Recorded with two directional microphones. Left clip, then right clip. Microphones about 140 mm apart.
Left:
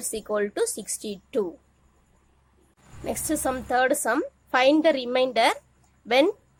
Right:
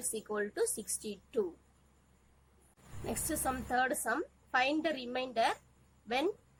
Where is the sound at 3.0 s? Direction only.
50° left (ahead or behind).